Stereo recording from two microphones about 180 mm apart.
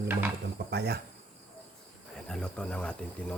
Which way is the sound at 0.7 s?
65° right (ahead or behind).